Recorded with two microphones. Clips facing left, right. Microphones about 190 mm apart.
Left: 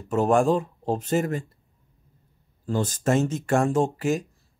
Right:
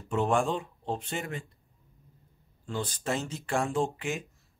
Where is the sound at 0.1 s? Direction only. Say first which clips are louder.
Left 7 dB; 40° left (ahead or behind).